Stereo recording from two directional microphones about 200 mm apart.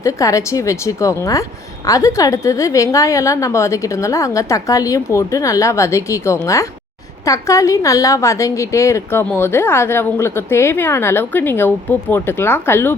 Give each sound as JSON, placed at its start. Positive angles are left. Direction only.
{"t": 0.0, "sound": "a woman's voice", "side_deg": 15}